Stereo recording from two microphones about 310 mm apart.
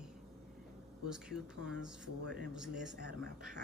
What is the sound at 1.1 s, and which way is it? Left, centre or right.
Speech, centre.